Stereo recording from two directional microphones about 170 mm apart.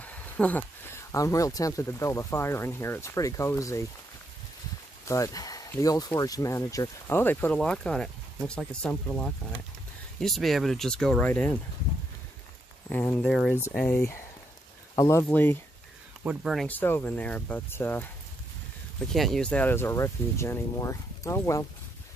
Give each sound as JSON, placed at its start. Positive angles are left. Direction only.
{"t": 0.0, "sound": "speech", "side_deg": 10}
{"t": 5.0, "sound": "speech", "side_deg": 20}
{"t": 12.9, "sound": "speech", "side_deg": 10}
{"t": 13.3, "sound": "speech", "side_deg": 0}
{"t": 13.7, "sound": "speech", "side_deg": 10}
{"t": 16.3, "sound": "speech", "side_deg": -5}
{"t": 16.6, "sound": "speech", "side_deg": 10}
{"t": 19.1, "sound": "speech", "side_deg": 0}